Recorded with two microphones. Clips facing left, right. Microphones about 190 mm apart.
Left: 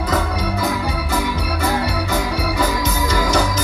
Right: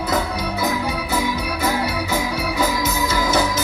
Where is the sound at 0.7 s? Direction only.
10° right (ahead or behind).